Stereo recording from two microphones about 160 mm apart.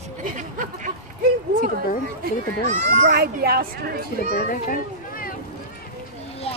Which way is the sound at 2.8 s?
50° right (ahead or behind).